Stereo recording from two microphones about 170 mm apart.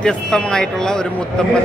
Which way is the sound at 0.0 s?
5° left (ahead or behind).